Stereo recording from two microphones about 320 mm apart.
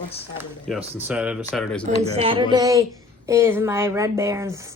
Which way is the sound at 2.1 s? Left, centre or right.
Centre.